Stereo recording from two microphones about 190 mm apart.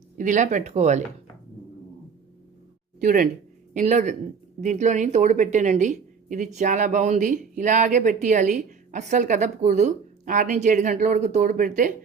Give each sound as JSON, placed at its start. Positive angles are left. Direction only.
{"t": 0.2, "sound": "speech", "side_deg": -40}
{"t": 3.0, "sound": "speech", "side_deg": -45}